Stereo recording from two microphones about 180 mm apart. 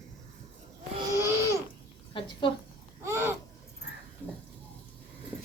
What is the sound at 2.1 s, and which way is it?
Speech, 25° left (ahead or behind).